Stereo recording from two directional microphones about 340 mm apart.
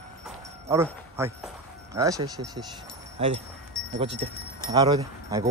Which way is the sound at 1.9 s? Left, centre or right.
Centre.